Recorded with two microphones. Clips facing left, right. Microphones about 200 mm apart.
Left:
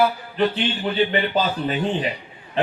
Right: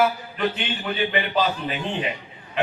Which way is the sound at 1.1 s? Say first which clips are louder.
Left 1 dB; 40° left (ahead or behind).